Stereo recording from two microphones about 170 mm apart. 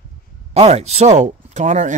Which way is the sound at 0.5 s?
40° right (ahead or behind).